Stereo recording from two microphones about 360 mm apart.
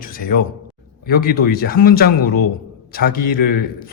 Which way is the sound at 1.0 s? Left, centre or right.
Left.